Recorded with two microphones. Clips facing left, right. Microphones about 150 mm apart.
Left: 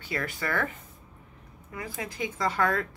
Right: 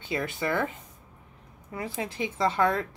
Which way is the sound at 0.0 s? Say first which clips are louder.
Right 3 dB; 20° right (ahead or behind).